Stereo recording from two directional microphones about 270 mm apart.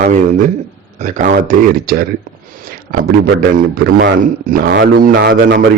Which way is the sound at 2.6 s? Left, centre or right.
Right.